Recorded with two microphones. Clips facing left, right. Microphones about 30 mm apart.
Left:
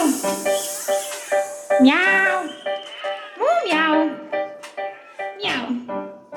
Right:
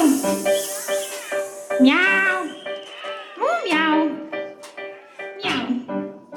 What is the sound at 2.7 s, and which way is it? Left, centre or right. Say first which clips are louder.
Music: left 5 dB; centre.